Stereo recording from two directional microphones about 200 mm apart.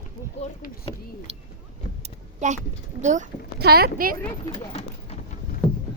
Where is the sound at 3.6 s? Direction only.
50° right (ahead or behind).